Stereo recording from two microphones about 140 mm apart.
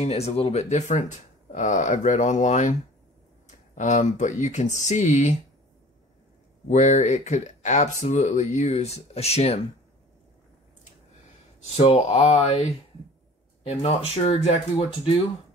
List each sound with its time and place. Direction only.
0.0 s speech: 50° left (ahead or behind)
6.7 s speech: 55° left (ahead or behind)
11.6 s speech: 45° left (ahead or behind)